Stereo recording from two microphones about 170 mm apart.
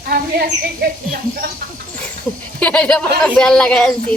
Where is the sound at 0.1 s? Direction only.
70° right (ahead or behind).